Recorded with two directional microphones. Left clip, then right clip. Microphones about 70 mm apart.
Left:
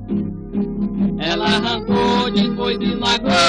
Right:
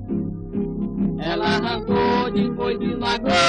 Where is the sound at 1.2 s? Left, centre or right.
Centre.